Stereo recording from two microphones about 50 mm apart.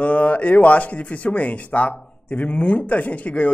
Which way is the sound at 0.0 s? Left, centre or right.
Left.